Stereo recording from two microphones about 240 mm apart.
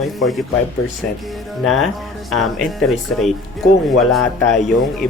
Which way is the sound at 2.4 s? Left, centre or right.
Centre.